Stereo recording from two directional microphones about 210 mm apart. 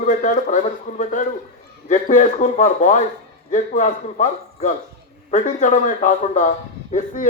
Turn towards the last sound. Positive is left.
turn(degrees=35)  # may be behind; listen again after turning